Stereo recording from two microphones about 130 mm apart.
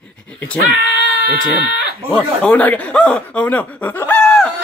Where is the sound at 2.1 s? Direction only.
10° left (ahead or behind).